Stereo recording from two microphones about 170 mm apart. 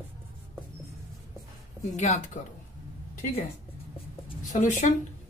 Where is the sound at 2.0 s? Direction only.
45° left (ahead or behind).